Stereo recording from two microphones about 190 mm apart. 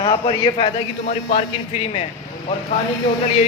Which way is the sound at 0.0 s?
25° left (ahead or behind).